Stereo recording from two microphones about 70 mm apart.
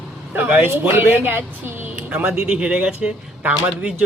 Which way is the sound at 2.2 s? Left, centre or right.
Centre.